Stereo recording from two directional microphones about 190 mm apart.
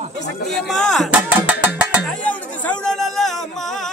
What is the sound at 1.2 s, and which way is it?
Music, 5° right (ahead or behind).